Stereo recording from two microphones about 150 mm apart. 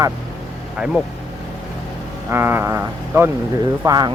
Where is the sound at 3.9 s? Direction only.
25° right (ahead or behind).